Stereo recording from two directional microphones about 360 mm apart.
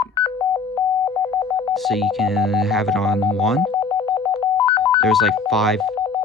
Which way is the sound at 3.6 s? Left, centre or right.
Centre.